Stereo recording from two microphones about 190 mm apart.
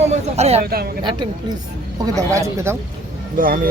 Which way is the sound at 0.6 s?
55° right (ahead or behind).